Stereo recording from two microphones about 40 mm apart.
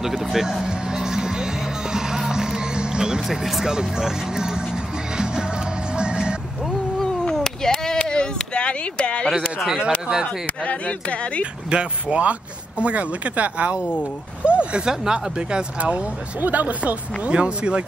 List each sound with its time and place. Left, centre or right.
0.0 s music: centre
3.4 s speech: centre
5.1 s music: centre
7.3 s chop: centre
8.0 s a sound: left
10.2 s speech: left
11.7 s speech: right
14.4 s a sound: right
14.9 s speech: right
16.3 s speech: right
17.3 s speech: right